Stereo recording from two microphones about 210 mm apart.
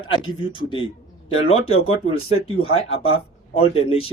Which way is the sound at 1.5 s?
85° left.